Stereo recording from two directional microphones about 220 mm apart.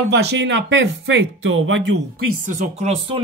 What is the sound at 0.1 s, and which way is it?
Speech, 50° right (ahead or behind).